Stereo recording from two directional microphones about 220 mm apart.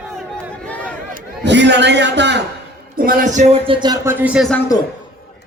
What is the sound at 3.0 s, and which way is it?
Speech, 35° right (ahead or behind).